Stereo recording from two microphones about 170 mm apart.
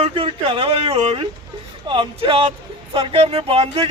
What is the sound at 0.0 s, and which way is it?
Speech, 35° right (ahead or behind).